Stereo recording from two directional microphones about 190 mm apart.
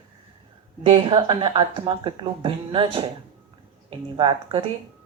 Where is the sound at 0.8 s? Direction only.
25° right (ahead or behind).